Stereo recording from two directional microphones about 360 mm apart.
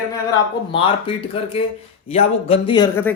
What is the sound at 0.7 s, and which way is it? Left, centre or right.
Speech, centre.